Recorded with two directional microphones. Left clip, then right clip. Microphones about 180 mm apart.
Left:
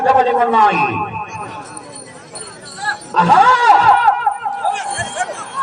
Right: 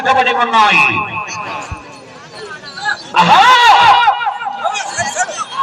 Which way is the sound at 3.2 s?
35° left (ahead or behind).